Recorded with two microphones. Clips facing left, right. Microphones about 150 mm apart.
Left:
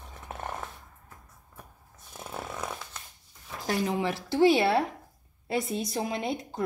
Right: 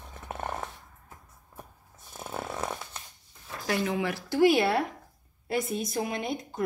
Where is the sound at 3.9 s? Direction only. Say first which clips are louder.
Left 1 dB; 25° left (ahead or behind).